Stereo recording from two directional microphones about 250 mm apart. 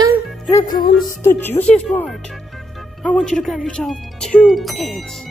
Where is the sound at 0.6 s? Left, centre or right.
Left.